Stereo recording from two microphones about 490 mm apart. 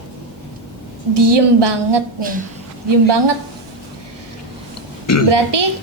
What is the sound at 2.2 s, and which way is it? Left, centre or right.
Speech, centre.